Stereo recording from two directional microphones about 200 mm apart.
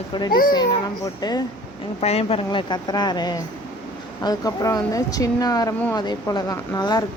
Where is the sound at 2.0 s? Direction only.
30° left (ahead or behind).